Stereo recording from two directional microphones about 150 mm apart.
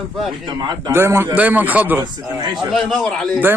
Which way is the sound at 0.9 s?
15° right (ahead or behind).